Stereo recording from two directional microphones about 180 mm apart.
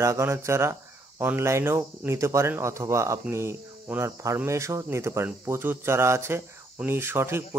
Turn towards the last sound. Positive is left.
turn(degrees=-15)  # may be behind; listen again after turning